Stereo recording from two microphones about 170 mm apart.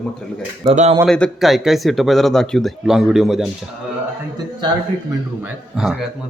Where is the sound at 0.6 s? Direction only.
25° right (ahead or behind).